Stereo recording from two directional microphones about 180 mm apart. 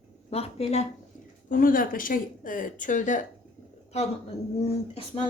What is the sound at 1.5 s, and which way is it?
A woman's voice, 50° left (ahead or behind).